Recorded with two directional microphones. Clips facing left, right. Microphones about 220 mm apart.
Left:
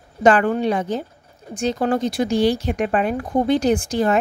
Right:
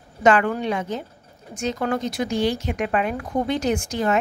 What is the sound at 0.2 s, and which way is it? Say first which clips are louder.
Speech: left 3 dB; 35° left (ahead or behind).